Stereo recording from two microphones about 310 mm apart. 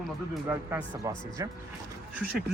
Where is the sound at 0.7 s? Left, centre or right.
Centre.